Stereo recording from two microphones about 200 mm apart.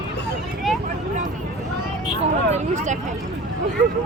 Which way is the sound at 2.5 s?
35° right (ahead or behind).